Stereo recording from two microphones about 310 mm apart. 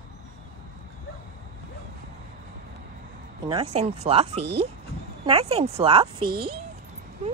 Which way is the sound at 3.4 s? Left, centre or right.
Centre.